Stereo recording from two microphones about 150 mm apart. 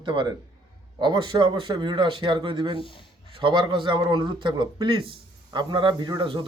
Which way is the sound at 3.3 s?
35° right (ahead or behind).